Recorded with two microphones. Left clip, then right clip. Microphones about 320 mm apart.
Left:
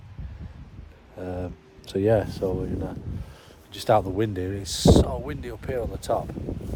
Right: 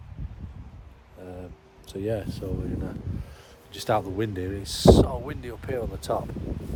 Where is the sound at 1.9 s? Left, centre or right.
Left.